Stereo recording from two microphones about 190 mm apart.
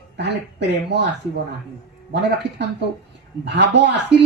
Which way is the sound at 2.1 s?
65° right (ahead or behind).